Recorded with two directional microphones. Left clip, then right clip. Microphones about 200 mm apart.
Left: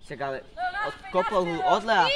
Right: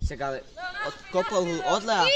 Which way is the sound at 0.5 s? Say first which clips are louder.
Left 5 dB; 40° left (ahead or behind).